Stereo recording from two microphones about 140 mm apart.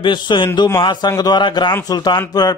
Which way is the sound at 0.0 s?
35° left (ahead or behind).